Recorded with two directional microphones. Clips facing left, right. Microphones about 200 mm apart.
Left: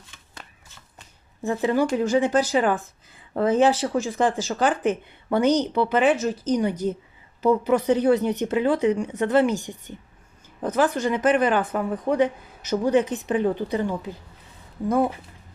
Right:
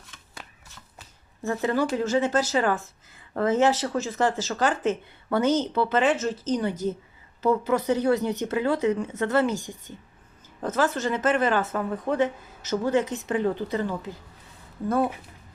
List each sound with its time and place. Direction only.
1.4 s speech: 15° left (ahead or behind)